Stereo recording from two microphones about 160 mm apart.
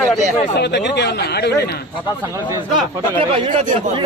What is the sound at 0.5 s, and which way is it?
Speech, 90° left.